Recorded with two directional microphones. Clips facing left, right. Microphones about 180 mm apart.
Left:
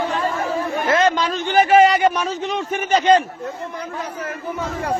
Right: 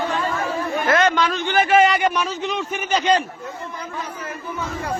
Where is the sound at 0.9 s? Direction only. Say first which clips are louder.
Even; 30° left (ahead or behind).